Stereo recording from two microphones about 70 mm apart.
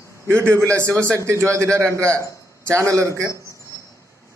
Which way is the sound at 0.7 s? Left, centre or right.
Right.